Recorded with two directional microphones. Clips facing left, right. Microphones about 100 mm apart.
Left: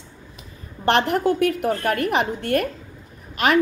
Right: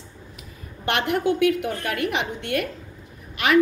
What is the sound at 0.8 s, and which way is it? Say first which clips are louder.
A woman's voice: left 4 dB; 35° left (ahead or behind).